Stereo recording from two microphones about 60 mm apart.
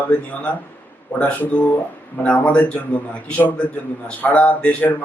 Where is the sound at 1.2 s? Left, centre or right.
Left.